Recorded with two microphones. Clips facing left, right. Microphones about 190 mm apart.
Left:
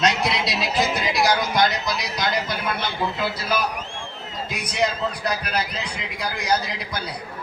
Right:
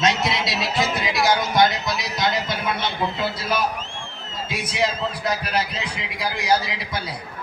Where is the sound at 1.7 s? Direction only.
Centre (ahead or behind).